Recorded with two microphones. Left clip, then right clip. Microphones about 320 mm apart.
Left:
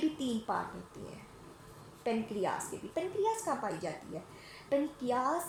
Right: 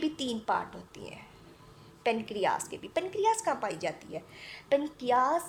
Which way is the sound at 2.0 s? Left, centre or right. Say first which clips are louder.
Right 5 dB; right.